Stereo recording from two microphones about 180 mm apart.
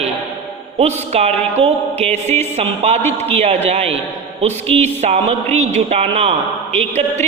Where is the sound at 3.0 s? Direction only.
10° left (ahead or behind).